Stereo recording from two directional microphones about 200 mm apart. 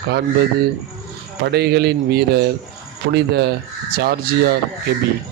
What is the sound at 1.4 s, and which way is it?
Speech, 55° right (ahead or behind).